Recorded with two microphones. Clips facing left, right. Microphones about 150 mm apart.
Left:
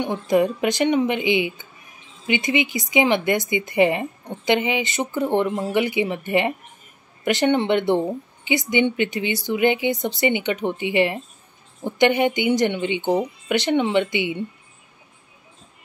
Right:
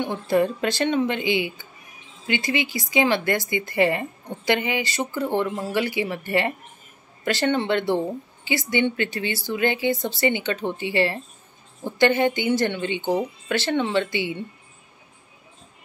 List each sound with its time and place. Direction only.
0.0 s a woman's voice: 15° left (ahead or behind)